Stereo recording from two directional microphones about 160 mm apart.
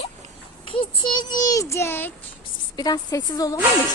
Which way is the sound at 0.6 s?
35° left (ahead or behind).